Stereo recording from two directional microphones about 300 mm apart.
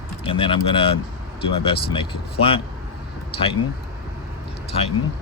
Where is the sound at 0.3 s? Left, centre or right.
Centre.